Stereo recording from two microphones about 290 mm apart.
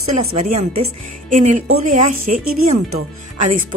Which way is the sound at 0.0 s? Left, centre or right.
Right.